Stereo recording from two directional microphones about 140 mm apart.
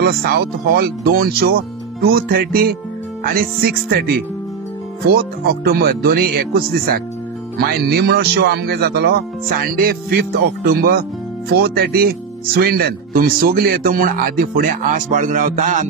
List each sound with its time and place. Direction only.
0.0 s speech: 90° right; by 15.8 s 60° right (ahead or behind)